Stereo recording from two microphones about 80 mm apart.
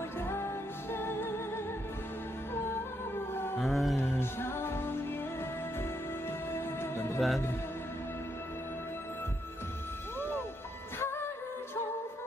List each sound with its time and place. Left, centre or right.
0.2 s music: left
3.5 s mantra: centre
4.0 s music: left
6.5 s music: left
7.2 s mantra: centre